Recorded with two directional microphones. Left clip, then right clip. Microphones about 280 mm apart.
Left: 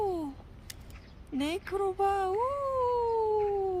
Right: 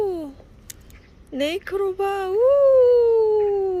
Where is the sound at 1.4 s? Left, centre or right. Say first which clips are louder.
Right 8 dB; centre.